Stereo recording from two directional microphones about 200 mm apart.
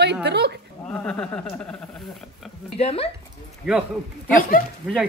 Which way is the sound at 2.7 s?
30° left (ahead or behind).